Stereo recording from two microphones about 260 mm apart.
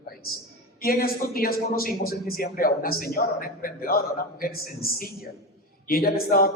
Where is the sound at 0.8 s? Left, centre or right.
Left.